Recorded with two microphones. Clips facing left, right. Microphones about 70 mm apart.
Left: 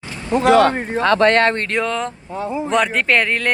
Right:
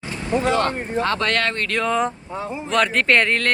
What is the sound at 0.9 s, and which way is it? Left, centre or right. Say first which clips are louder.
Speech: left 5 dB; left.